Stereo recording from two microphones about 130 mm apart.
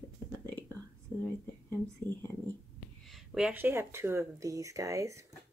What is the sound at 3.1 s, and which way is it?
Speech, 5° right (ahead or behind).